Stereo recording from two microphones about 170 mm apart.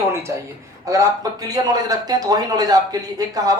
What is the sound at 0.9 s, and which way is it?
A man's voice, 20° right (ahead or behind).